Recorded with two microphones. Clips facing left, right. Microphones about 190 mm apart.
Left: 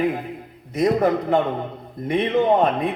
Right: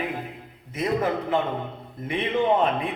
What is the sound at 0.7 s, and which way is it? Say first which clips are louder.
A man's voice: left 6 dB; 40° left (ahead or behind).